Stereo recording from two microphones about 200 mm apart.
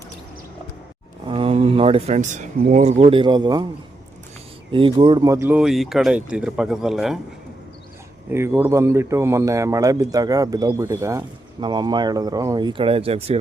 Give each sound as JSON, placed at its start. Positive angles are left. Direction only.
{"t": 1.3, "sound": "speech", "side_deg": -30}
{"t": 4.7, "sound": "speech", "side_deg": -25}
{"t": 8.3, "sound": "speech", "side_deg": -10}